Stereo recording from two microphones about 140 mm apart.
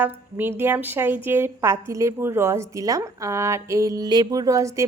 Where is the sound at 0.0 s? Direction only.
15° right (ahead or behind).